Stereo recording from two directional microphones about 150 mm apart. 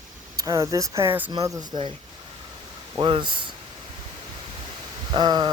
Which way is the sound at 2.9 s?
35° right (ahead or behind).